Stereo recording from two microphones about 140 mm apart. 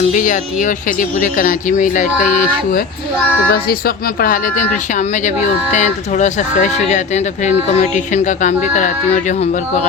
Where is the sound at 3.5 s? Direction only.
90° left; by 4.6 s 75° left (ahead or behind).